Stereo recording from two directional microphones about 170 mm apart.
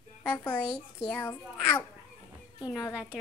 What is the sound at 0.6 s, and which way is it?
Speech, 25° left (ahead or behind).